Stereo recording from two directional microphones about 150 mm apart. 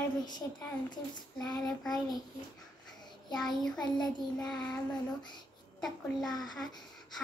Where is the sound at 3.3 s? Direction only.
5° left (ahead or behind).